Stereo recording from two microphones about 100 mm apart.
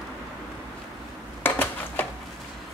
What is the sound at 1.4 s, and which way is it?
Dishes, 20° left (ahead or behind).